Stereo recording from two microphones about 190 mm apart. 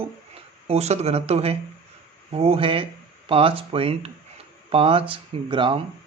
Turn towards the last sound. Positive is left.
turn(degrees=-25)  # may be behind; listen again after turning